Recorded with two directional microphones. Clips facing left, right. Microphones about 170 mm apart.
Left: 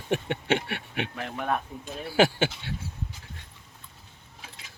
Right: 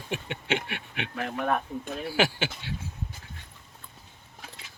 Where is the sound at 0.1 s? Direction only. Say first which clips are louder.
Left 4 dB; 50° left (ahead or behind).